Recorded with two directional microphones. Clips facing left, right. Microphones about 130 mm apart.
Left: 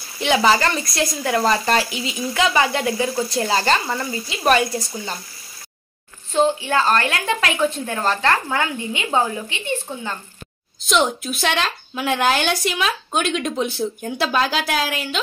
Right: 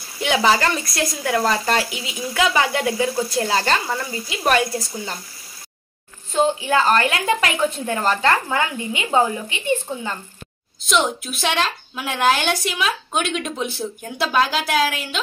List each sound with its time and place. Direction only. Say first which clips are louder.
0.2 s speech: left 1 dB; centre (ahead or behind)
6.7 s speech: right 1 dB; 20° right (ahead or behind)
10.9 s speech: left 1 dB; centre (ahead or behind)